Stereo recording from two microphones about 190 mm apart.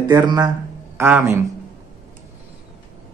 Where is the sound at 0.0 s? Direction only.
20° right (ahead or behind).